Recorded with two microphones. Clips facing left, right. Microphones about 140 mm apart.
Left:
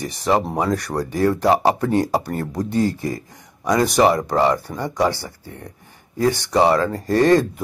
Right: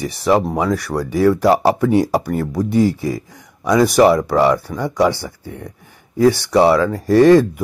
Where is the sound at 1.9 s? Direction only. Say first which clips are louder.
Right 4 dB; 10° right (ahead or behind).